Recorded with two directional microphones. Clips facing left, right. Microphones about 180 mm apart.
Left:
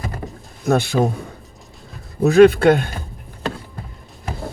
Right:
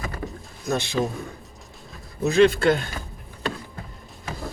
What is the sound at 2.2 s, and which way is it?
Speech, 60° left (ahead or behind).